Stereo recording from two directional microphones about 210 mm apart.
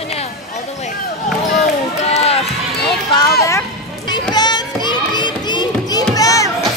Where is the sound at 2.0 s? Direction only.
30° left (ahead or behind).